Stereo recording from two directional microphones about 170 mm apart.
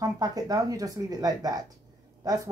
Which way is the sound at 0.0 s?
20° right (ahead or behind).